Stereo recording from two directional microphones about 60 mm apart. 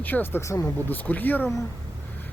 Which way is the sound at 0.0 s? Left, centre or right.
Left.